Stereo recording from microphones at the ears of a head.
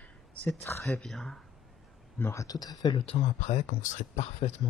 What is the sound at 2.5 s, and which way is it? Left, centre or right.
Speech, left.